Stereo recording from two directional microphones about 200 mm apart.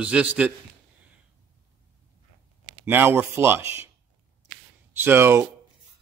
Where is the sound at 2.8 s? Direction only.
10° right (ahead or behind).